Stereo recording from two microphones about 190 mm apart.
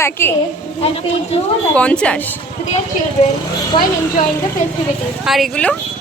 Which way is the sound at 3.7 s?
25° left (ahead or behind).